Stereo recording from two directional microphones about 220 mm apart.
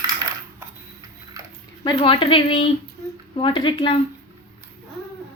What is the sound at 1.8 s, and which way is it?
A woman's voice, 20° left (ahead or behind).